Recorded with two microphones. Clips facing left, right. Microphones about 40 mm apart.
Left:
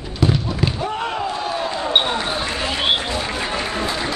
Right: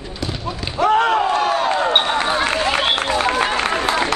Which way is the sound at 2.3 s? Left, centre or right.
Right.